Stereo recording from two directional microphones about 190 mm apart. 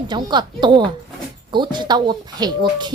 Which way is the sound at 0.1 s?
25° right (ahead or behind).